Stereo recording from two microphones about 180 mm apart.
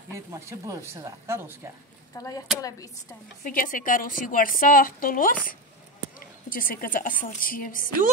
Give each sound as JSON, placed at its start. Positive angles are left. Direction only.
{"t": 0.1, "sound": "speech", "side_deg": -15}
{"t": 2.1, "sound": "speech", "side_deg": 20}
{"t": 3.4, "sound": "a woman's voice", "side_deg": 50}